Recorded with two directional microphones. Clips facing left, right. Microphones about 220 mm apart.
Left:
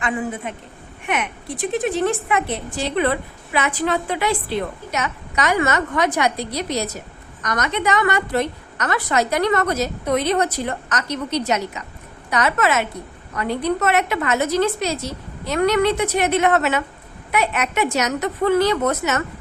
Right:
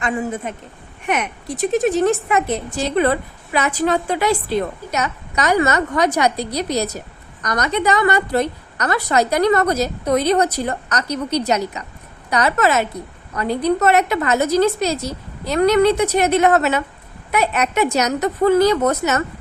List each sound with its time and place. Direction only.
0.5 s a woman's voice: 40° right (ahead or behind)